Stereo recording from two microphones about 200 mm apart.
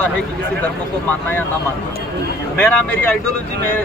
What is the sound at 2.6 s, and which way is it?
Speech, 10° left (ahead or behind).